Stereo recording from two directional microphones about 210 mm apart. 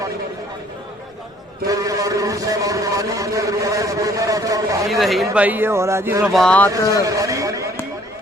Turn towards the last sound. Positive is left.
turn(degrees=-15)  # may be behind; listen again after turning